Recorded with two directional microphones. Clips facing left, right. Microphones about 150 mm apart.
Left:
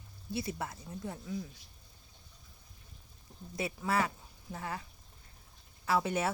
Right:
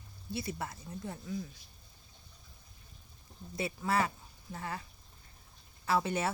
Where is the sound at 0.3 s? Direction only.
20° left (ahead or behind).